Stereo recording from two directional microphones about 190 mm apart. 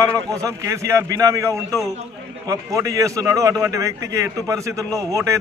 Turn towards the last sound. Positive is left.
turn(degrees=-15)  # may be behind; listen again after turning